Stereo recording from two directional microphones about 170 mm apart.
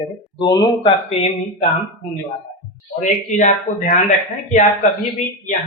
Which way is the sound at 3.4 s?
45° left (ahead or behind).